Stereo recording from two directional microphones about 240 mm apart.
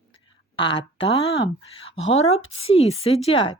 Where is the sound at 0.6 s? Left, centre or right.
Left.